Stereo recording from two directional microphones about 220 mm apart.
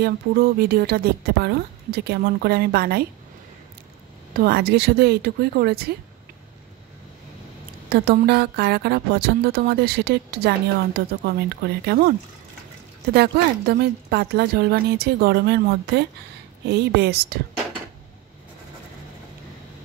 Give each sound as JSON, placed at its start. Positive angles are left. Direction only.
{"t": 0.0, "sound": "speech", "side_deg": -45}
{"t": 4.4, "sound": "speech", "side_deg": -45}
{"t": 7.9, "sound": "speech", "side_deg": -45}